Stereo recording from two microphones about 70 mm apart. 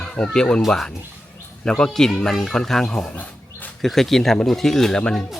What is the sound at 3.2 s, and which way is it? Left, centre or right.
Bird, left.